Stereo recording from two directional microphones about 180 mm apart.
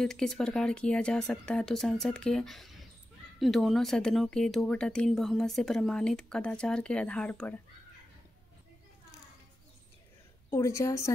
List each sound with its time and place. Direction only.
0.0 s speech: 5° left (ahead or behind)
10.5 s a woman's voice: 15° left (ahead or behind)